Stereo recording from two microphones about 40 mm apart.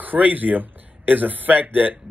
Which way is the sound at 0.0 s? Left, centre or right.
Right.